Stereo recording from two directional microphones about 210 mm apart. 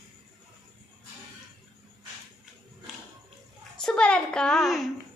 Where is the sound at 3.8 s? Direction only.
5° left (ahead or behind).